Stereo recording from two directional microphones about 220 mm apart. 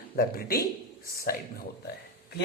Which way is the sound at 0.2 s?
45° left (ahead or behind).